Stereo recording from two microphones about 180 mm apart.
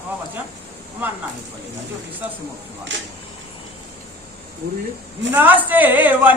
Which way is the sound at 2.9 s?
90° right.